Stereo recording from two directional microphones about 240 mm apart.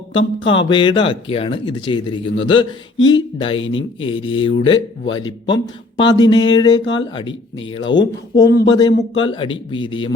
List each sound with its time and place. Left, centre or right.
0.7 s speech: centre
3.6 s speech: left
4.0 s speech: left
6.0 s a sound: centre
6.8 s speech: centre